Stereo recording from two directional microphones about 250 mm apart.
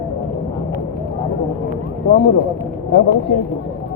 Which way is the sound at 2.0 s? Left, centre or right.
Left.